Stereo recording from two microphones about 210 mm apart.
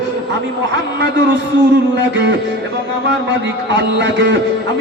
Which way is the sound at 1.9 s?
55° right (ahead or behind).